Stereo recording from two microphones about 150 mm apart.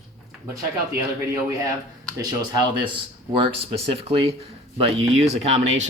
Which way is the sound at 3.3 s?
40° right (ahead or behind).